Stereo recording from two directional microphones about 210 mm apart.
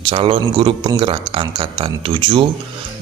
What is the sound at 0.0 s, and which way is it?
Speech, 25° right (ahead or behind).